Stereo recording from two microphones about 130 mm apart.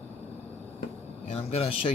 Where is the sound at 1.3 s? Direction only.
50° left (ahead or behind).